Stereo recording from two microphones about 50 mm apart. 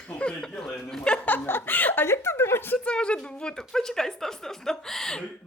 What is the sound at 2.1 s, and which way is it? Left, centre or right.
Speech, left.